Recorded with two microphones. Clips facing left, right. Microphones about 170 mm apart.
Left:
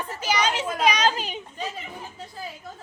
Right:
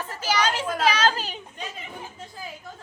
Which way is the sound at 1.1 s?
35° right (ahead or behind).